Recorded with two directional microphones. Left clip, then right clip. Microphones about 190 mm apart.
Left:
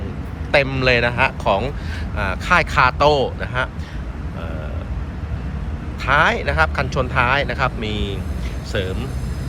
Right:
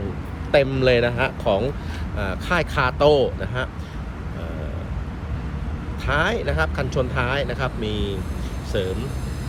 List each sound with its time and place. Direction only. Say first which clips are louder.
0.5 s speech: left 1 dB; 15° right (ahead or behind)
6.1 s speech: left 6 dB; 15° right (ahead or behind)